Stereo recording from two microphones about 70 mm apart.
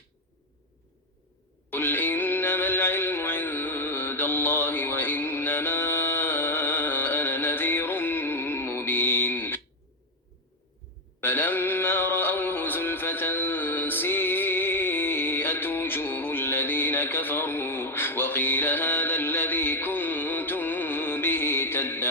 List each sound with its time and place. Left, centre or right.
1.7 s music: left
11.2 s music: left